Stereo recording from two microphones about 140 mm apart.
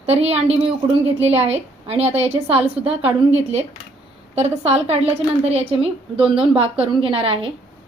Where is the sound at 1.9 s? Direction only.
50° right (ahead or behind).